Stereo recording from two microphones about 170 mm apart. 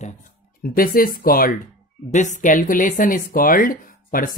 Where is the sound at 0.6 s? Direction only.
60° left (ahead or behind).